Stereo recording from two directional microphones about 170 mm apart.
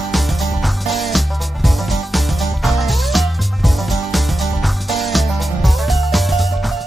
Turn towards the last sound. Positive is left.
turn(degrees=0)  # may be behind; listen again after turning